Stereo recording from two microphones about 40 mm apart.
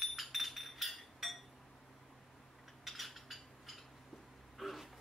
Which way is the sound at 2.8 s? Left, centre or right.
Centre.